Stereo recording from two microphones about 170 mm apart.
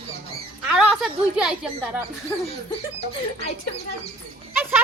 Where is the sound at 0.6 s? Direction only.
5° right (ahead or behind).